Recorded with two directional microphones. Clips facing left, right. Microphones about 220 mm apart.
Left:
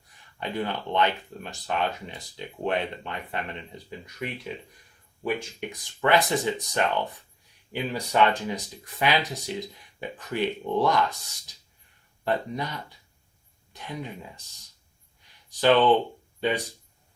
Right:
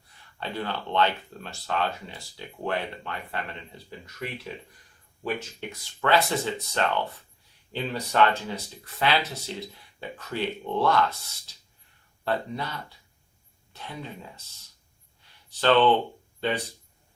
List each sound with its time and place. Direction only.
0.3 s speech: 15° left (ahead or behind)
15.4 s speech: 15° left (ahead or behind)